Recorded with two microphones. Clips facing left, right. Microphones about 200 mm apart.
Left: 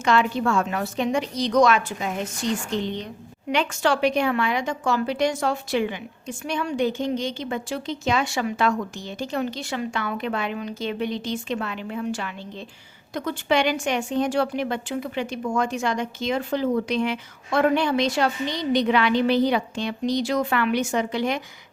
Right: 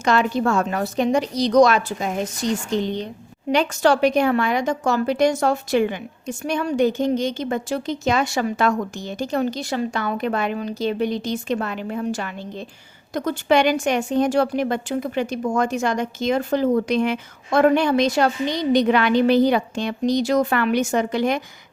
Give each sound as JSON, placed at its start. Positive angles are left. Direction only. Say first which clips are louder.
{"t": 0.0, "sound": "a woman's voice", "louder": "right 2 dB", "side_deg": -40}
{"t": 3.5, "sound": "a woman's voice", "louder": "right 5 dB", "side_deg": -40}